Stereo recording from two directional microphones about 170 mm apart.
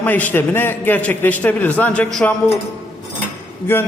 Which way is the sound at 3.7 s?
15° left (ahead or behind).